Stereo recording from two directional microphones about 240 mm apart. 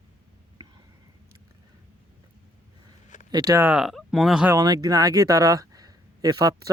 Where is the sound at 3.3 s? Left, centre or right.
Centre.